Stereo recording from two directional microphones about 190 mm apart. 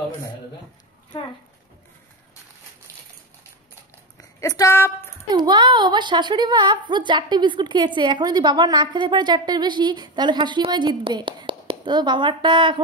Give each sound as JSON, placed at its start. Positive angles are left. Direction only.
{"t": 4.2, "sound": "speech", "side_deg": 15}
{"t": 5.3, "sound": "a woman's voice", "side_deg": -20}